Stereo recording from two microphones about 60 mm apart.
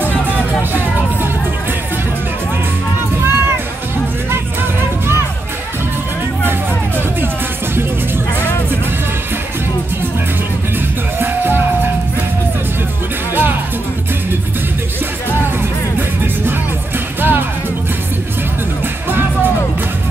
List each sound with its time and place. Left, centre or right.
3.3 s music: right
11.1 s music: right
13.3 s music: right
17.2 s music: right